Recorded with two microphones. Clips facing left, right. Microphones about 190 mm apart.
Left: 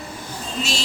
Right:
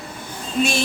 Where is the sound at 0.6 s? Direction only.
55° right (ahead or behind).